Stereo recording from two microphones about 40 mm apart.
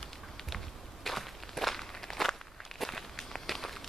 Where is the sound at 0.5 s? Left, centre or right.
Centre.